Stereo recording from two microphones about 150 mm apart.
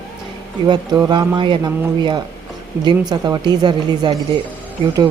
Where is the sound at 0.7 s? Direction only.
30° right (ahead or behind).